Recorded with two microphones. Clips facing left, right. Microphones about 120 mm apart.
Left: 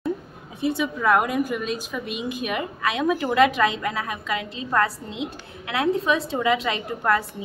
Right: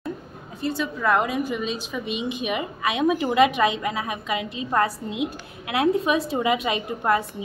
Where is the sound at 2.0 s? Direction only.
45° left (ahead or behind).